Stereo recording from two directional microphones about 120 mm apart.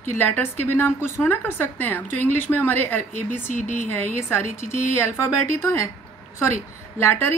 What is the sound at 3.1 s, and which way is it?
Speech, 75° right (ahead or behind).